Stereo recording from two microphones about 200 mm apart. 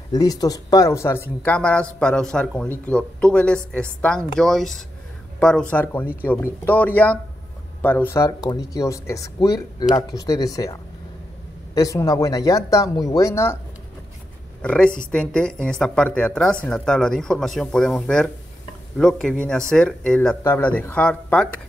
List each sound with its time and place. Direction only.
0.1 s speech: 20° left (ahead or behind)
14.6 s speech: 5° left (ahead or behind)